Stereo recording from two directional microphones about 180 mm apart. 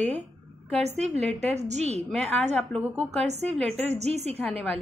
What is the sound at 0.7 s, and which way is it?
A woman's voice, 35° right (ahead or behind).